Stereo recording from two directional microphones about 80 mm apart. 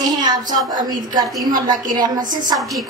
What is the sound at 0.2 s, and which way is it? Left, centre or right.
A woman's voice, right.